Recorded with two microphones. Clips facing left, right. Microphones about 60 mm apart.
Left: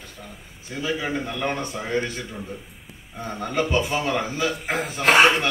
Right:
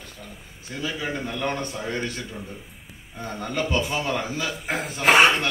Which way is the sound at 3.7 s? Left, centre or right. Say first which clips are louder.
Left 2 dB; left.